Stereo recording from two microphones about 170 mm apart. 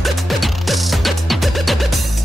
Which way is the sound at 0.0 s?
Centre (ahead or behind).